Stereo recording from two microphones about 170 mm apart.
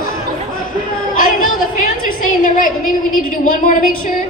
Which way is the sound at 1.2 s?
55° left (ahead or behind).